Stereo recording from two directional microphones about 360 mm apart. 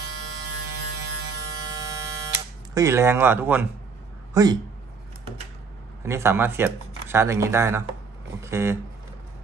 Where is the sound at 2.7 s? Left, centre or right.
Centre.